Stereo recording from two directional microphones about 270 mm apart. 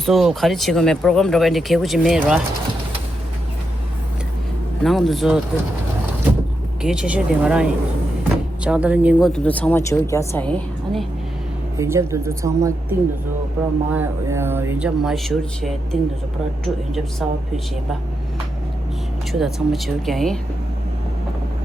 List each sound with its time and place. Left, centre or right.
0.0 s speech: centre
4.8 s speech: centre
6.8 s speech: centre
11.8 s speech: centre
19.3 s speech: centre